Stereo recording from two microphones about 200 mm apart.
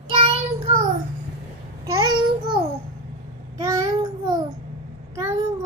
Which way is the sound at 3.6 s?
15° right (ahead or behind).